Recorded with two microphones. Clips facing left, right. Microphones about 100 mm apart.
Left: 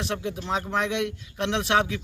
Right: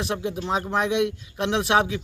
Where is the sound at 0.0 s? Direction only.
10° right (ahead or behind).